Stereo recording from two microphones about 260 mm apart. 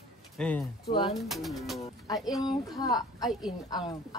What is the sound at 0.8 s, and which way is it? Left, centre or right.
Speech, left.